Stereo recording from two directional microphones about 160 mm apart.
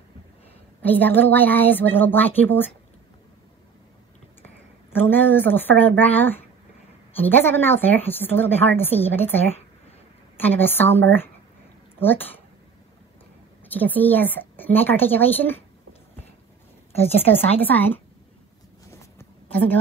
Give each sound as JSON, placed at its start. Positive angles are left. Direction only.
{"t": 0.8, "sound": "a woman's voice", "side_deg": 10}
{"t": 4.9, "sound": "a woman's voice", "side_deg": 10}
{"t": 13.7, "sound": "a woman's voice", "side_deg": 10}
{"t": 16.9, "sound": "a woman's voice", "side_deg": 40}
{"t": 17.6, "sound": "a woman's voice", "side_deg": 10}
{"t": 18.9, "sound": "walk", "side_deg": 15}